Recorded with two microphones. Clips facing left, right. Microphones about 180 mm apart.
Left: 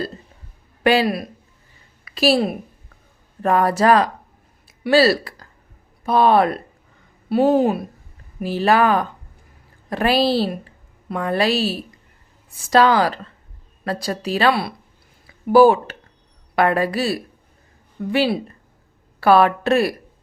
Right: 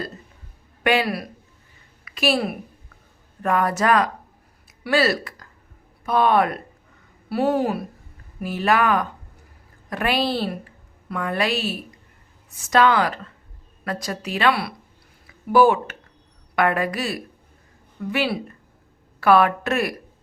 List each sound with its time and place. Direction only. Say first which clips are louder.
0.9 s a woman's voice: left 4 dB; 30° left (ahead or behind)
2.0 s a woman's voice: left 5 dB; 35° left (ahead or behind)